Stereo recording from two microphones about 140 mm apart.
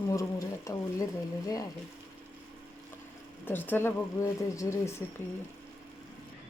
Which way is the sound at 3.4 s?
15° left (ahead or behind).